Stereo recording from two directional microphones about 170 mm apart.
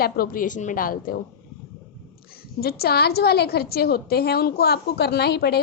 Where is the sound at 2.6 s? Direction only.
65° left (ahead or behind).